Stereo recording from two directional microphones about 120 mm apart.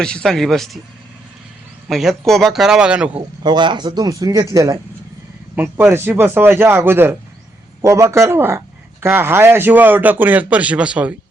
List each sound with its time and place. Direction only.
0.0 s speech: 5° left (ahead or behind)
1.9 s speech: centre (ahead or behind)
3.4 s speech: 40° right (ahead or behind)
5.5 s speech: 20° right (ahead or behind)